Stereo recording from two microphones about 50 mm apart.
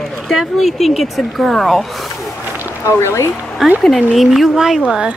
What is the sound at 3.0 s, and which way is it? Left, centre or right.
Speech, left.